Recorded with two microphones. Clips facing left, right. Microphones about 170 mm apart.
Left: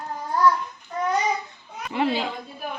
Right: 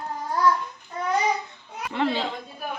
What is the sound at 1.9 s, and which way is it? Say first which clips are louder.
Speech: left 1 dB; 10° left (ahead or behind).